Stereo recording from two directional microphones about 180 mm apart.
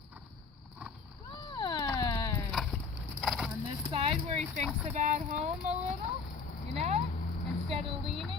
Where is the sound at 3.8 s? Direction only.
30° right (ahead or behind).